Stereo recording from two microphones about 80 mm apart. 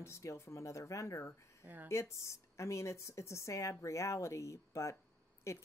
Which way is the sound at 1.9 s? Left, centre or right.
Left.